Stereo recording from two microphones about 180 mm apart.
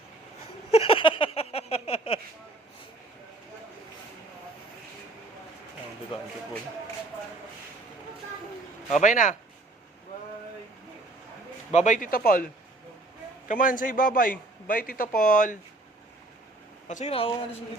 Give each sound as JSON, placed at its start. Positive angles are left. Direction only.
{"t": 0.7, "sound": "a sound", "side_deg": 30}
{"t": 8.9, "sound": "a man's voice", "side_deg": 45}
{"t": 11.7, "sound": "a man's voice", "side_deg": 40}
{"t": 13.5, "sound": "a man's voice", "side_deg": 45}
{"t": 16.9, "sound": "speech", "side_deg": 35}